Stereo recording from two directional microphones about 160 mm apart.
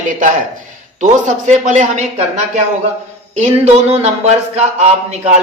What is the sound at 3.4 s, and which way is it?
Speech, 45° right (ahead or behind).